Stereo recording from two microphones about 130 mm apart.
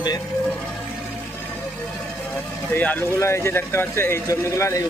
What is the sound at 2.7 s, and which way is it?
Speech, 15° left (ahead or behind).